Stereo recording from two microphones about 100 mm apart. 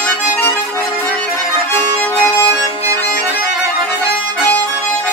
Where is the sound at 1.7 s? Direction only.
20° left (ahead or behind).